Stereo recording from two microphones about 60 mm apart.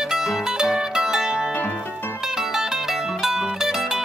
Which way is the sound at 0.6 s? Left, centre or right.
Centre.